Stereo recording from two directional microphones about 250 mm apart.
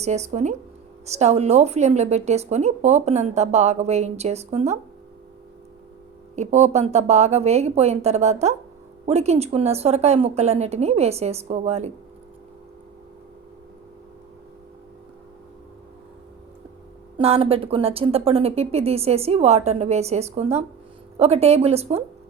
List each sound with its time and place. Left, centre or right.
0.0 s a woman's voice: right
6.3 s a woman's voice: right
17.2 s a woman's voice: right